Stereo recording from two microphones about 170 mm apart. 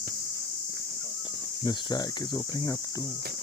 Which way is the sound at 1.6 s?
25° left (ahead or behind).